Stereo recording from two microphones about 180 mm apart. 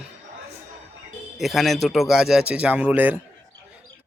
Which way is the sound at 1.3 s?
Centre (ahead or behind).